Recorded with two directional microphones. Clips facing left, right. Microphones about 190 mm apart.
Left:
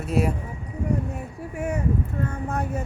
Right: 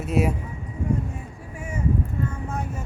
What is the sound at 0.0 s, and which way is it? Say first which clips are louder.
Speech: right 1 dB; 5° right (ahead or behind).